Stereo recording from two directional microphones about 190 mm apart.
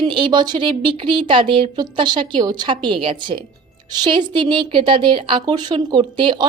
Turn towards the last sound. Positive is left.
turn(degrees=-25)  # may be behind; listen again after turning